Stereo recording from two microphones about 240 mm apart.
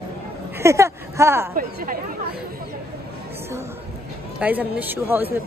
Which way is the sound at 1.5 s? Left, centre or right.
Right.